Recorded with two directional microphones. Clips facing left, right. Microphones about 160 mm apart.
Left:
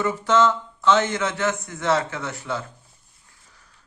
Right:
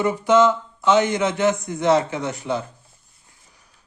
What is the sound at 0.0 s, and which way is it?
A man's voice, 15° right (ahead or behind).